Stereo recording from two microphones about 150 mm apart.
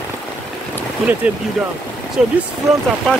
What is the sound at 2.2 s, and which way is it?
Speech, 5° right (ahead or behind).